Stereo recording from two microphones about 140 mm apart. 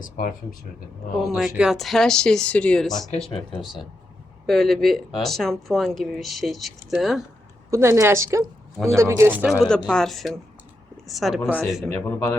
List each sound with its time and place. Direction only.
0.0 s speech: 80° left
1.4 s speech: 5° right (ahead or behind)
4.4 s speech: centre (ahead or behind)
7.7 s a woman's voice: 20° right (ahead or behind)
9.5 s speech: 5° left (ahead or behind)
11.9 s speech: 20° left (ahead or behind)